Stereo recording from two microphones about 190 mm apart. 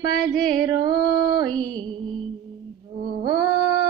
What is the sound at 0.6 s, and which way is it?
Music, 20° right (ahead or behind).